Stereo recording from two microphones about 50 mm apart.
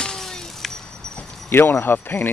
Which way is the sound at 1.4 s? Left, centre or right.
Left.